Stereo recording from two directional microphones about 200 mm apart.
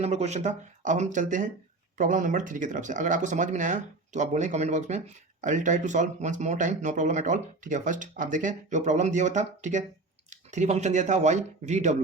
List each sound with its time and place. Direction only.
0.0 s speech: 35° right (ahead or behind)